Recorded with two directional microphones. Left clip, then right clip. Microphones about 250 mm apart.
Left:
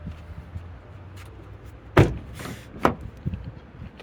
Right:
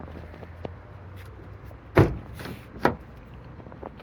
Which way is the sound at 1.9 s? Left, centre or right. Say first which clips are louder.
Left 1 dB; left.